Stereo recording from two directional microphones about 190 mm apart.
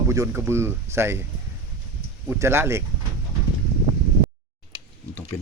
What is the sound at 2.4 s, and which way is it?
Speech, 15° right (ahead or behind).